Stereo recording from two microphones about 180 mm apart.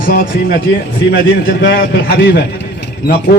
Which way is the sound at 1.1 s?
65° left (ahead or behind).